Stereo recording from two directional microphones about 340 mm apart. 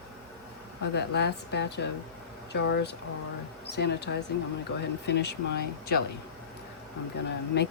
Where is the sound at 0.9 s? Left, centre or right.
Left.